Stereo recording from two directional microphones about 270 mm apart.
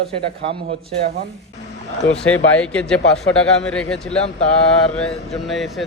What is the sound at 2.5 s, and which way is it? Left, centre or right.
A man's voice, centre.